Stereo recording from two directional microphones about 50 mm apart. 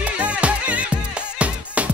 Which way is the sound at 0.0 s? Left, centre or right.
Right.